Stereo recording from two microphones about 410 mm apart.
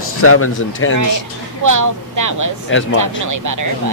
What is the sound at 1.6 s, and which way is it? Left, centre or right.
Speech, right.